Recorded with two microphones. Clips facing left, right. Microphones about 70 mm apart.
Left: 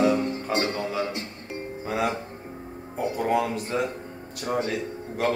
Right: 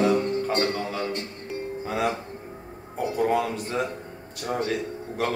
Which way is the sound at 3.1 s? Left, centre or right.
Centre.